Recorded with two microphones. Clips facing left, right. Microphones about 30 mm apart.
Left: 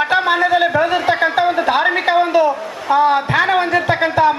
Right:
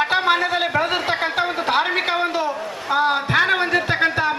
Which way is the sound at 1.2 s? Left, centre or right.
Centre.